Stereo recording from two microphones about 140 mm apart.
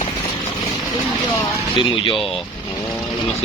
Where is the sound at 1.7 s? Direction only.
35° left (ahead or behind).